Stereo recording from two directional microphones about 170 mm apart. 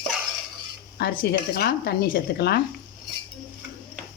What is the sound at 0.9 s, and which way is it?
Speech, 70° left (ahead or behind).